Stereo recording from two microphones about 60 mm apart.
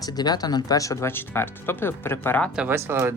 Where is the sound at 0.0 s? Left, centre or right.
Left.